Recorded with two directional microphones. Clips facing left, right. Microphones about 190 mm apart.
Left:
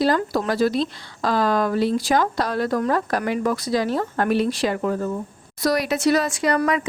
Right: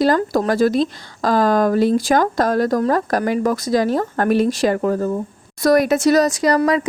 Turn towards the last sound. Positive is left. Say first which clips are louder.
# right 4 dB
turn(degrees=-35)  # may be behind; listen again after turning